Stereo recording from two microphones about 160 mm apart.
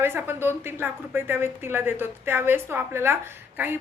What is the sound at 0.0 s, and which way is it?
Speech, 15° right (ahead or behind).